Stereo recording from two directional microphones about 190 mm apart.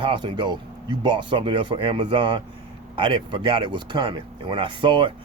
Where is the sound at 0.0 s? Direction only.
25° right (ahead or behind).